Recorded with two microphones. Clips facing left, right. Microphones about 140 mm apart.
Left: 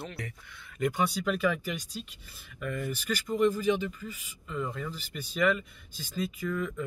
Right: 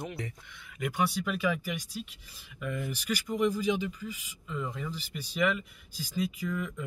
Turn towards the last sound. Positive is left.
turn(degrees=-10)  # may be behind; listen again after turning